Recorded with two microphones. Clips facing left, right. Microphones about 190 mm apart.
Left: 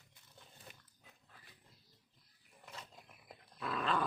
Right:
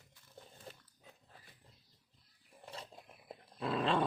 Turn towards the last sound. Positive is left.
turn(degrees=-30)  # may be behind; listen again after turning